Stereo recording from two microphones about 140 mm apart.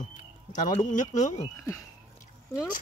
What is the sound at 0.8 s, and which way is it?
Speech, 60° left (ahead or behind).